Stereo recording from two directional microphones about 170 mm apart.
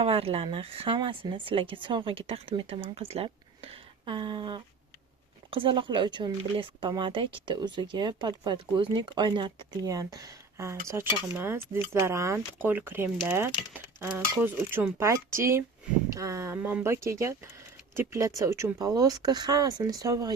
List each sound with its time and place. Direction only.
0.0 s speech: 35° right (ahead or behind)